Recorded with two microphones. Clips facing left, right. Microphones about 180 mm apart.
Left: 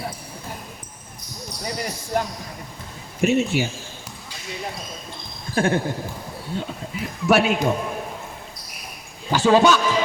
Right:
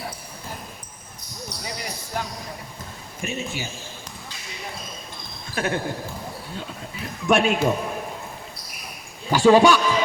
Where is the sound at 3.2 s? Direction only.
70° left (ahead or behind).